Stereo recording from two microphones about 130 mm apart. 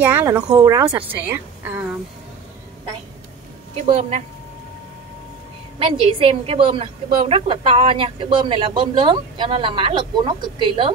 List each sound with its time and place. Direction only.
0.0 s speech: 20° right (ahead or behind)
1.2 s a woman's voice: 15° right (ahead or behind)
3.7 s speech: 60° right (ahead or behind)
5.8 s a woman's voice: 45° right (ahead or behind)